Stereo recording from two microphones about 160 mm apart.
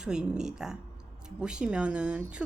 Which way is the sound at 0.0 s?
5° right (ahead or behind).